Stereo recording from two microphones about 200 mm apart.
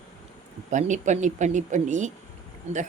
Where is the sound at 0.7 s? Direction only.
35° right (ahead or behind).